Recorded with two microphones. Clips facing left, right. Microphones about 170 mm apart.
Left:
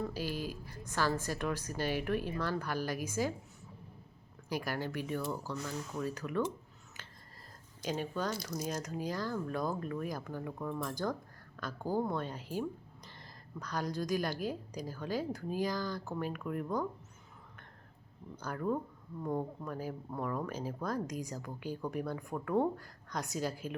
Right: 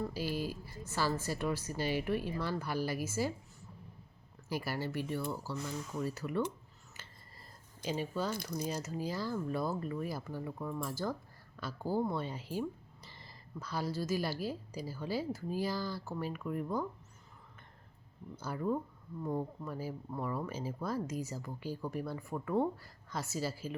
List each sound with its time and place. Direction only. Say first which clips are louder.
0.0 s speech: right 1 dB; 10° right (ahead or behind)
4.4 s speech: left 1 dB; 5° right (ahead or behind)
7.9 s speech: even; 5° right (ahead or behind)
8.4 s speech: right 1 dB; 60° right (ahead or behind)
8.7 s speech: even; 5° right (ahead or behind)
18.3 s speech: even; 5° right (ahead or behind)